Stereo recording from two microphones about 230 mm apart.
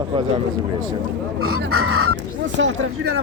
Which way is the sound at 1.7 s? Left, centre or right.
Right.